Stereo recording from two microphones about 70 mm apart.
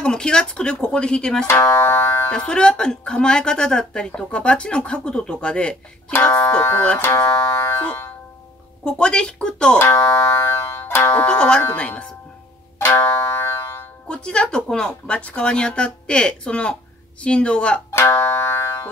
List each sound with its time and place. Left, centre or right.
0.0 s a woman's voice: centre
1.5 s speech: left
2.3 s a woman's voice: centre
7.0 s speech: left
8.8 s a woman's voice: centre
9.8 s speech: left
11.2 s a woman's voice: centre
12.7 s music: left
14.0 s a woman's voice: centre
17.9 s speech: left